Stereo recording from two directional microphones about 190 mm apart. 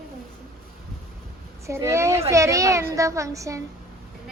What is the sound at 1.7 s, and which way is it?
A woman's voice, 15° right (ahead or behind).